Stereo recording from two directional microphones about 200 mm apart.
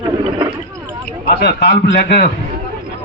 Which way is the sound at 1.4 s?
55° left (ahead or behind).